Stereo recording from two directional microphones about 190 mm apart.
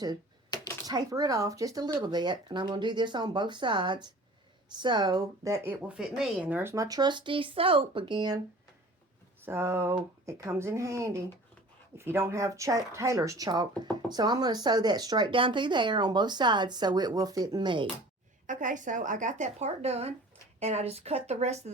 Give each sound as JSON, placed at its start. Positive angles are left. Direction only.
{"t": 0.5, "sound": "a sound", "side_deg": 20}
{"t": 0.9, "sound": "speech", "side_deg": -20}
{"t": 5.9, "sound": "speech", "side_deg": -5}
{"t": 9.4, "sound": "speech", "side_deg": -15}
{"t": 18.4, "sound": "speech", "side_deg": -40}